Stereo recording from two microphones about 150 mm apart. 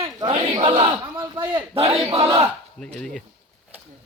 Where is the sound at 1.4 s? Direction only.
35° right (ahead or behind).